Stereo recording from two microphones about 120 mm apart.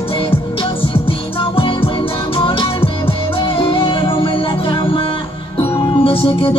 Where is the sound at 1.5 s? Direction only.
50° left (ahead or behind).